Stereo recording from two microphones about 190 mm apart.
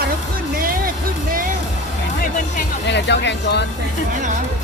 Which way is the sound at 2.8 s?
65° left (ahead or behind).